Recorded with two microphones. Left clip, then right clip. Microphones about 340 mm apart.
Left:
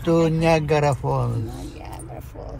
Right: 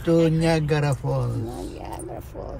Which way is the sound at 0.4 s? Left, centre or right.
Centre.